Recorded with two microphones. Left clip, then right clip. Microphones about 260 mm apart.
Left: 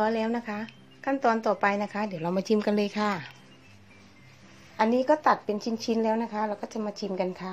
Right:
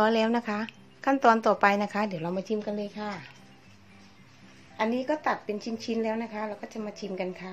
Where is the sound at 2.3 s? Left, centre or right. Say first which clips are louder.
Left 5 dB; centre.